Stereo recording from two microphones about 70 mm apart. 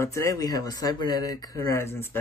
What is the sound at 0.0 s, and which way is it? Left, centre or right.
Speech, left.